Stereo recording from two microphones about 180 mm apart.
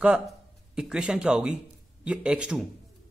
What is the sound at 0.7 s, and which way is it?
Speech, 5° right (ahead or behind).